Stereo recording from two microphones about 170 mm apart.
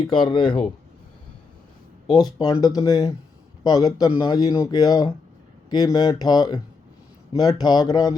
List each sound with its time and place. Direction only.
0.0 s speech: 30° left (ahead or behind)
2.4 s speech: 25° left (ahead or behind)